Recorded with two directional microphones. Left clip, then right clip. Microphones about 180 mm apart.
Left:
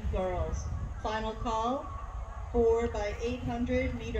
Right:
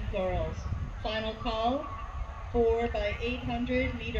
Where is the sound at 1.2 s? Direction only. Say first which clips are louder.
Right 2 dB; 45° left (ahead or behind).